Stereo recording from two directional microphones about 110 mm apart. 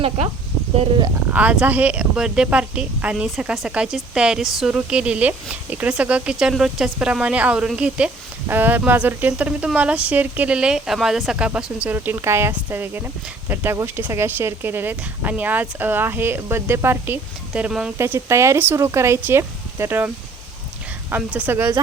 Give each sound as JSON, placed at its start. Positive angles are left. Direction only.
{"t": 1.3, "sound": "speech", "side_deg": -10}
{"t": 17.5, "sound": "speech", "side_deg": -10}
{"t": 17.9, "sound": "speech", "side_deg": -25}
{"t": 21.1, "sound": "speech", "side_deg": -10}